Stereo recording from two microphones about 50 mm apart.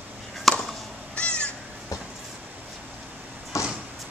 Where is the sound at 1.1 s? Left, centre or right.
Left.